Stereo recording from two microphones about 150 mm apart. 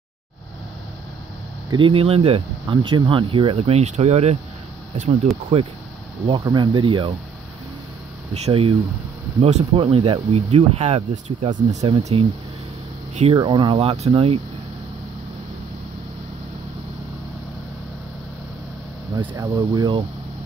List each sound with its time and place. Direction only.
1.7 s speech: 35° right (ahead or behind)
6.4 s speech: 30° right (ahead or behind)
8.5 s speech: 35° right (ahead or behind)
11.5 s speech: 50° right (ahead or behind)
11.9 s speech: 40° right (ahead or behind)
13.3 s speech: 30° right (ahead or behind)
19.1 s speech: 25° right (ahead or behind)